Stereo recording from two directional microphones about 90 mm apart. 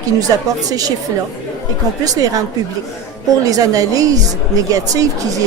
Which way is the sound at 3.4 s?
40° right (ahead or behind).